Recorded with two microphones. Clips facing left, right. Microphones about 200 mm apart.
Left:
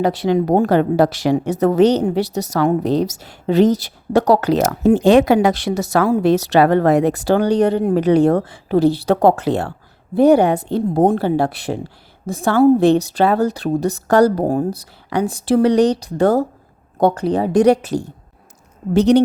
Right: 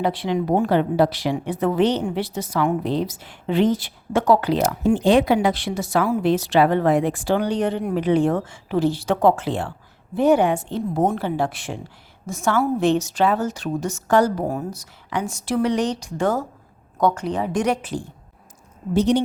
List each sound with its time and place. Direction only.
0.0 s a woman's voice: 40° left (ahead or behind)
5.1 s speech: 80° left
5.7 s speech: 60° left (ahead or behind)
6.1 s a woman's voice: 35° left (ahead or behind)
18.9 s a woman's voice: 70° left (ahead or behind)